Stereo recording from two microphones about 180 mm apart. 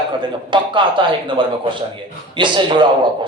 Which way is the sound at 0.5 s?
25° right (ahead or behind).